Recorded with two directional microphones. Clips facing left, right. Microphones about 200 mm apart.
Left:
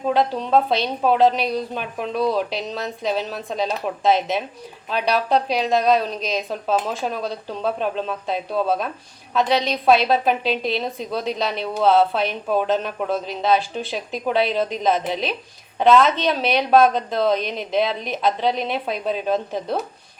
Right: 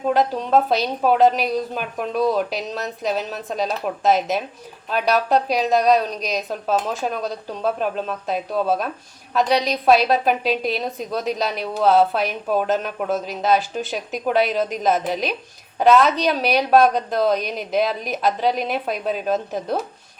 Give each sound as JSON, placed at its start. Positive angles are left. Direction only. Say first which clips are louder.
{"t": 0.0, "sound": "a woman's voice", "louder": "right 1 dB", "side_deg": 0}